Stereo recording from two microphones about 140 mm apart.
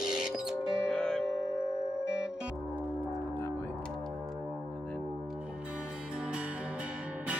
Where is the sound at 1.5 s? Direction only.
20° left (ahead or behind).